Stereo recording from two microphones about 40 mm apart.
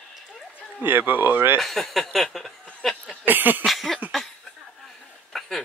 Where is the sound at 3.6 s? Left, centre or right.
Centre.